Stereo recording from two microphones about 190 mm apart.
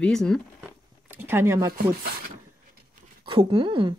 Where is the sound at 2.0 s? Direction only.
55° right (ahead or behind).